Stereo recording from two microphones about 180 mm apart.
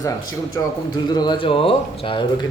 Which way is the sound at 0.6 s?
15° left (ahead or behind).